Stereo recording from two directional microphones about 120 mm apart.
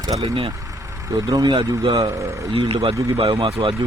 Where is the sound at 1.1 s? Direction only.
30° right (ahead or behind).